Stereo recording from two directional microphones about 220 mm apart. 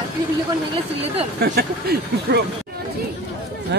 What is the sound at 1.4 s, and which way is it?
Speech, 45° right (ahead or behind).